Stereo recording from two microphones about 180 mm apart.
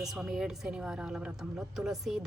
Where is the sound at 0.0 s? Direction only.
Centre (ahead or behind).